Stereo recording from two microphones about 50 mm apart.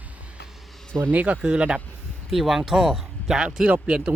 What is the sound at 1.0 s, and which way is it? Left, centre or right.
Speech, right.